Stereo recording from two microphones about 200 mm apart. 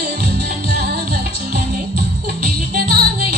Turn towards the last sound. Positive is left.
turn(degrees=-50)  # may be behind; listen again after turning